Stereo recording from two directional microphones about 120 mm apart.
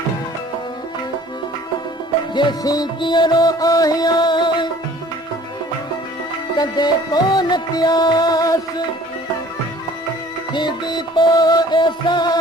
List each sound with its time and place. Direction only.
2.3 s music: 40° left (ahead or behind)
6.6 s music: 35° left (ahead or behind)
10.5 s music: 40° left (ahead or behind)